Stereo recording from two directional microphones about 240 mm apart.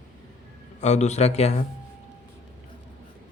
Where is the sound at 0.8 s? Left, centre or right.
Left.